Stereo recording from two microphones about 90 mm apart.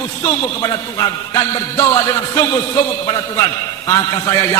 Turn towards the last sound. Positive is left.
turn(degrees=45)  # may be behind; listen again after turning